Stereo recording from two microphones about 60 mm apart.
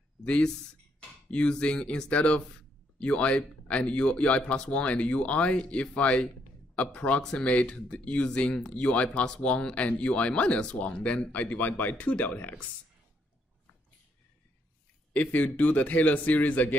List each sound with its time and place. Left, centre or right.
0.2 s speech: centre
15.1 s speech: left